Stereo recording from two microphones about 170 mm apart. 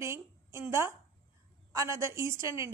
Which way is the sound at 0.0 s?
15° right (ahead or behind).